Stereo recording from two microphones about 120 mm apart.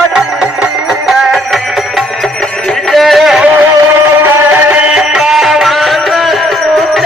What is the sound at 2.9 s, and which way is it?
Music, centre (ahead or behind).